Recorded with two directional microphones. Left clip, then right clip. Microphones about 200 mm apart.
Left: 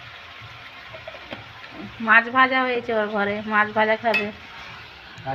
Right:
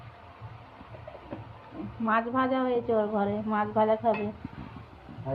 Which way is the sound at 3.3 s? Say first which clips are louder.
Left 8 dB; 10° left (ahead or behind).